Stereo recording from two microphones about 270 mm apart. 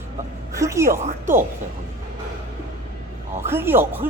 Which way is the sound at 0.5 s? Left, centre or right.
Centre.